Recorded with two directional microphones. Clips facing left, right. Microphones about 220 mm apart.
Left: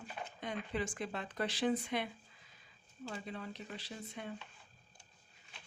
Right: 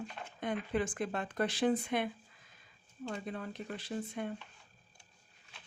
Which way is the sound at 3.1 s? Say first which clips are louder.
Right 3 dB; 50° right (ahead or behind).